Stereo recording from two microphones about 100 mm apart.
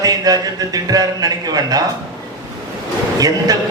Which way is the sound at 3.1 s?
40° right (ahead or behind).